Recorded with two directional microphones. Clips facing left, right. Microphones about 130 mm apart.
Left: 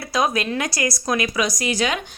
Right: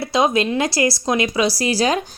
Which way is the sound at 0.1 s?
25° right (ahead or behind).